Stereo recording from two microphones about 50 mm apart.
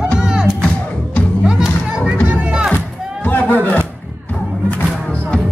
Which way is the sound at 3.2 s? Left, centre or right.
Left.